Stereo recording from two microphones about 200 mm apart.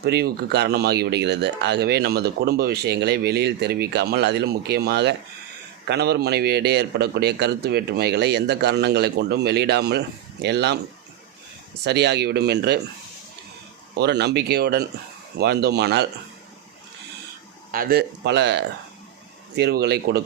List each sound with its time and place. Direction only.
0.0 s speech: 55° right (ahead or behind)
11.8 s speech: 55° right (ahead or behind)
13.9 s speech: 55° right (ahead or behind)
17.7 s speech: 45° right (ahead or behind)